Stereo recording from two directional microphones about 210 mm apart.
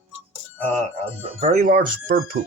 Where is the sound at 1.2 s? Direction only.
30° right (ahead or behind).